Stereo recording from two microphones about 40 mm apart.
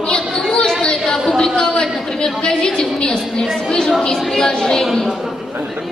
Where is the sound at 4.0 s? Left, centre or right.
Centre.